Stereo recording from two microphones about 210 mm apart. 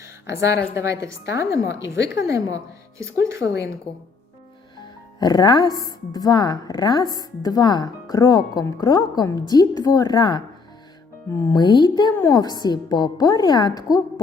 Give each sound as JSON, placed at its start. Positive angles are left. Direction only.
{"t": 0.0, "sound": "a sound", "side_deg": -15}
{"t": 1.4, "sound": "a woman's voice", "side_deg": -15}
{"t": 3.4, "sound": "a woman's voice", "side_deg": 50}
{"t": 5.2, "sound": "a woman's voice", "side_deg": 20}
{"t": 11.4, "sound": "speech", "side_deg": 20}